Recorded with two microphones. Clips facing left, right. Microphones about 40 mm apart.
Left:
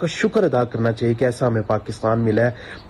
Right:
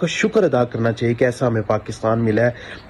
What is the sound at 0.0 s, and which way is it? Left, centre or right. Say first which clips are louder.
Speech: right 2 dB; right.